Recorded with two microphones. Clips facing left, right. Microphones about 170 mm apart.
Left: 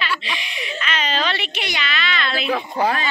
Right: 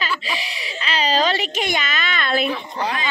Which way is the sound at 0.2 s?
35° right (ahead or behind).